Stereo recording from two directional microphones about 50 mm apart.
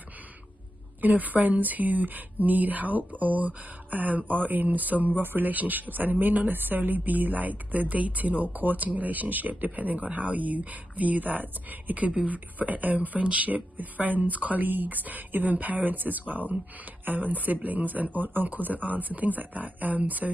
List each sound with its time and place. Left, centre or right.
1.0 s speech: right